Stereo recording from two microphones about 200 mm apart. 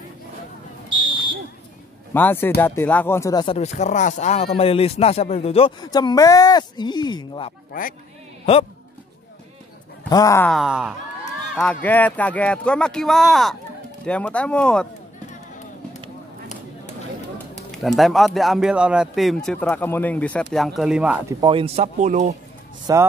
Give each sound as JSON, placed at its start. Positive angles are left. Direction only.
{"t": 2.1, "sound": "speech", "side_deg": 10}
{"t": 3.5, "sound": "speech", "side_deg": 35}
{"t": 7.7, "sound": "speech", "side_deg": 45}
{"t": 10.0, "sound": "speech", "side_deg": 15}
{"t": 10.5, "sound": "speech", "side_deg": -5}
{"t": 17.6, "sound": "speech", "side_deg": 0}
{"t": 21.4, "sound": "speech", "side_deg": -25}
{"t": 22.9, "sound": "speech", "side_deg": -20}